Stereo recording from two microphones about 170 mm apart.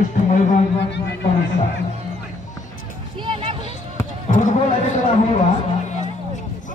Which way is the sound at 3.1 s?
30° right (ahead or behind).